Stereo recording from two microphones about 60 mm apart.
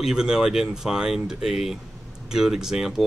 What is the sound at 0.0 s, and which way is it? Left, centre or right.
Speech, centre.